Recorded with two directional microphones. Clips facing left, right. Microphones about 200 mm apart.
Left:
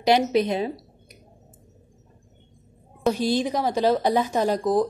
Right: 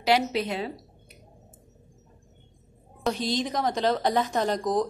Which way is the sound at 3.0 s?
10° left (ahead or behind).